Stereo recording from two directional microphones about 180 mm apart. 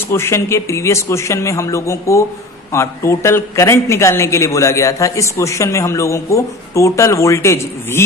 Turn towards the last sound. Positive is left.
turn(degrees=15)  # may be behind; listen again after turning